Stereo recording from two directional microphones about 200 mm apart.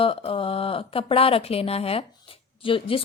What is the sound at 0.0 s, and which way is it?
A woman's voice, 25° left (ahead or behind).